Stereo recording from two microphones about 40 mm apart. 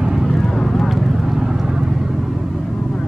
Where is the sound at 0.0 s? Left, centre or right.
Centre.